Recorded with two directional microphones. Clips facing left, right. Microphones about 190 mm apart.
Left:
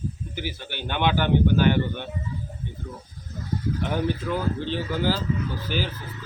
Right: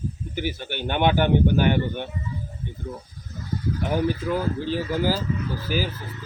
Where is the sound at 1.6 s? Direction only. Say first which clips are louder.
Even; 15° right (ahead or behind).